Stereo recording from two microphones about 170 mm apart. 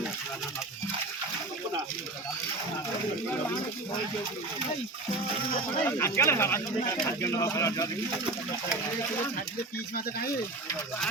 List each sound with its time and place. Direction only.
5.8 s speech: 15° left (ahead or behind)